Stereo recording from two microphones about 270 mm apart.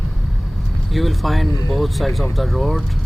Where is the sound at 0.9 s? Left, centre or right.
Centre.